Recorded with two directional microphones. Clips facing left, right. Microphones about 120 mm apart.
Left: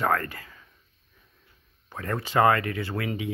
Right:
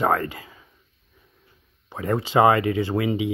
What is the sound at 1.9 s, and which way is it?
Speech, 15° right (ahead or behind).